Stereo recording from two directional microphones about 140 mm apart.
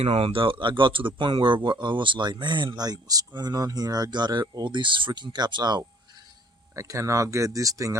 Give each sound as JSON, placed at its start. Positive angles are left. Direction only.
{"t": 0.0, "sound": "speech", "side_deg": -45}